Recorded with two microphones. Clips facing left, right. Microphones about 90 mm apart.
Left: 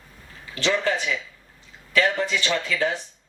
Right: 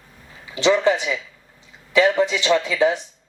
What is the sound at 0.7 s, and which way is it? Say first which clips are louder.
A man's voice: right 6 dB; 15° right (ahead or behind).